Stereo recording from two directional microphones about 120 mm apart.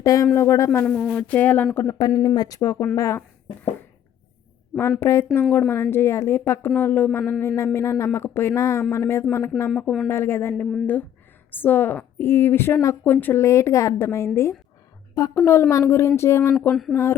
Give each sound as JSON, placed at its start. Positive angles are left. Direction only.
{"t": 0.0, "sound": "a woman's voice", "side_deg": 30}
{"t": 0.9, "sound": "speech", "side_deg": 10}
{"t": 2.0, "sound": "a woman's voice", "side_deg": 35}
{"t": 4.8, "sound": "a woman's voice", "side_deg": 25}
{"t": 9.7, "sound": "speech", "side_deg": 5}
{"t": 10.1, "sound": "a woman's voice", "side_deg": 20}
{"t": 11.5, "sound": "a woman's voice", "side_deg": 15}